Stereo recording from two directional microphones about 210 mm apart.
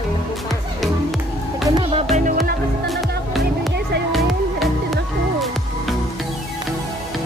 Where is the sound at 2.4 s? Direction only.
Centre (ahead or behind).